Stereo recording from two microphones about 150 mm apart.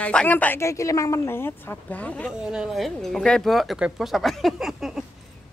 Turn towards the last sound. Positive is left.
turn(degrees=0)  # may be behind; listen again after turning